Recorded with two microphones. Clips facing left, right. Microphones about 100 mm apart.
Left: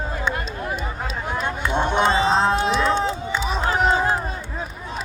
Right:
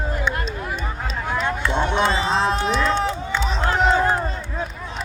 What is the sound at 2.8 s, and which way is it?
Music, 15° left (ahead or behind).